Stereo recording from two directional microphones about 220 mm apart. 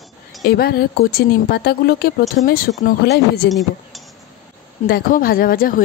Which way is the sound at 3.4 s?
Centre (ahead or behind).